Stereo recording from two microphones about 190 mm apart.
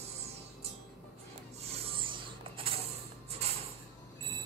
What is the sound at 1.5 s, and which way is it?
Rub, 30° right (ahead or behind).